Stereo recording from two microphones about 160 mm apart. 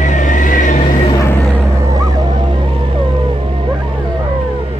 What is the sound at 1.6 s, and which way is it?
Whale vocalization, 20° right (ahead or behind).